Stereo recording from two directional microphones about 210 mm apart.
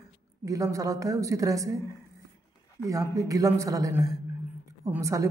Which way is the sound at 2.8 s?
15° right (ahead or behind).